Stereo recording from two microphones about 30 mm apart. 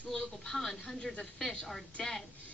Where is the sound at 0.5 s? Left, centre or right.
Centre.